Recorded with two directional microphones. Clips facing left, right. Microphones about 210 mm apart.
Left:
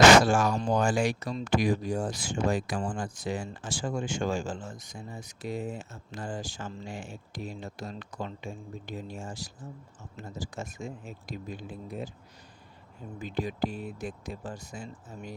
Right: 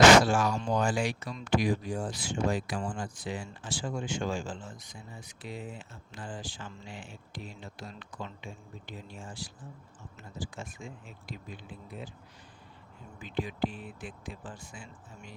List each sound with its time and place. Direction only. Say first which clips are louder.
0.2 s speech: left 2 dB; 45° left (ahead or behind)
13.1 s speech: left 2 dB; 40° left (ahead or behind)